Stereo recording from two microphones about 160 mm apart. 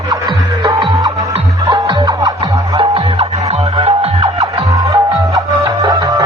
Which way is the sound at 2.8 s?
35° right (ahead or behind).